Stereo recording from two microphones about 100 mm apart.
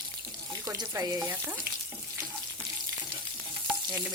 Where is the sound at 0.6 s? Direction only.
40° right (ahead or behind).